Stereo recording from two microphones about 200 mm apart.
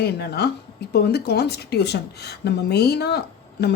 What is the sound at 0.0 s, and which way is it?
Speech, 55° left (ahead or behind).